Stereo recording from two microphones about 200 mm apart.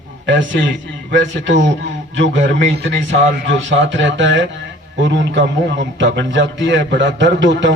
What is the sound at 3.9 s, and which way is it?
Speech, 65° right (ahead or behind).